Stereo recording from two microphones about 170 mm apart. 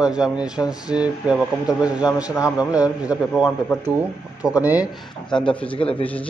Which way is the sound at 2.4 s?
5° right (ahead or behind).